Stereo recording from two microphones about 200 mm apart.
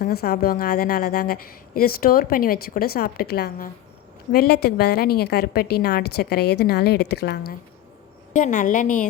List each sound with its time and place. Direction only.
0.0 s a woman's voice: 50° left (ahead or behind)
8.3 s a woman's voice: 40° left (ahead or behind)